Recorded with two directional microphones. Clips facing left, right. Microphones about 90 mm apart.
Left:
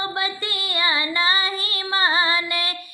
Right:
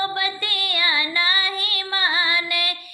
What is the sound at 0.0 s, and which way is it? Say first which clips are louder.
Female singing: right 1 dB; 25° left (ahead or behind).